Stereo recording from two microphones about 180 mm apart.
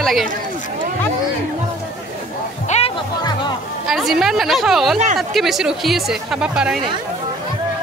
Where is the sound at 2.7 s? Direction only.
40° left (ahead or behind).